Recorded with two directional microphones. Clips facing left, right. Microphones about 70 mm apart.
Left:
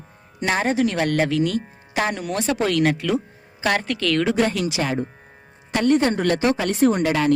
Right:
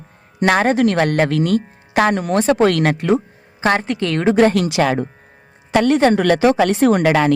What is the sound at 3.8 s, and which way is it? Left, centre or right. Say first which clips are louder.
Speech: right 2 dB; right.